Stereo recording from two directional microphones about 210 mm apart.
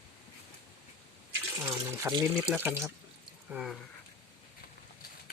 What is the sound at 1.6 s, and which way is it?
Speech, 15° right (ahead or behind).